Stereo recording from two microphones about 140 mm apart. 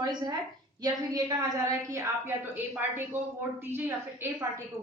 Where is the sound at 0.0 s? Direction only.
30° right (ahead or behind).